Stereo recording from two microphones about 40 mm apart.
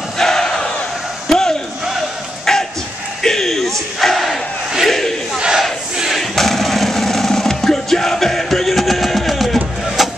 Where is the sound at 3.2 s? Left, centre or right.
Centre.